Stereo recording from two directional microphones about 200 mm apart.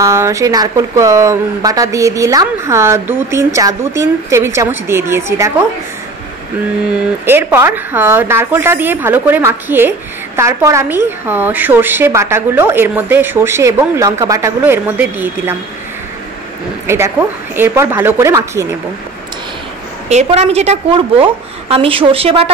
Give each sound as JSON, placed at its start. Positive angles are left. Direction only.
{"t": 0.0, "sound": "a woman's voice", "side_deg": -15}
{"t": 7.2, "sound": "a woman's voice", "side_deg": -10}
{"t": 16.8, "sound": "a woman's voice", "side_deg": -10}
{"t": 20.1, "sound": "a woman's voice", "side_deg": -35}